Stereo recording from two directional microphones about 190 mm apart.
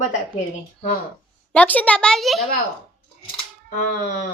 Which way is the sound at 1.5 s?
5° left (ahead or behind).